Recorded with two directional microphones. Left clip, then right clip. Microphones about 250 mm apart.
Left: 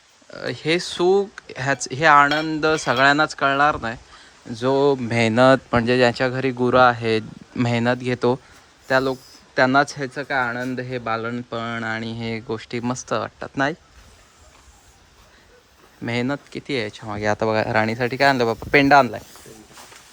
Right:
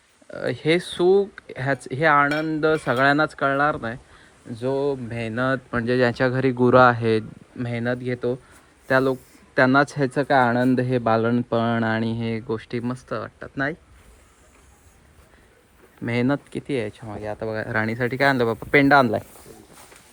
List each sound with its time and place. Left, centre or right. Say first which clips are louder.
0.3 s speech: right 1 dB; centre
4.5 s speech: left 6 dB; left; by 7.3 s centre
7.6 s speech: left 5 dB; centre
8.9 s speech: even; centre
10.1 s speech: right 4 dB; centre
16.0 s speech: right 1 dB; centre
17.2 s speech: left 9 dB; left